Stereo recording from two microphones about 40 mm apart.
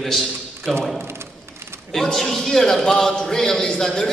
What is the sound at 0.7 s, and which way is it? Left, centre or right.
Speech, centre.